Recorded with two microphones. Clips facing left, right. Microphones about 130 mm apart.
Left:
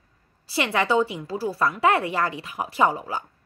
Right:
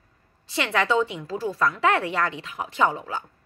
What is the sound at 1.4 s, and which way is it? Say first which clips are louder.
Speech: even; 30° left (ahead or behind).